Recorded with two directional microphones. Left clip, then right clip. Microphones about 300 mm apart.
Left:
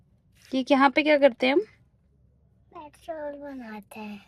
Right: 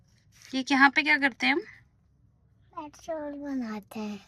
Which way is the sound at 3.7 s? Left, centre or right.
Right.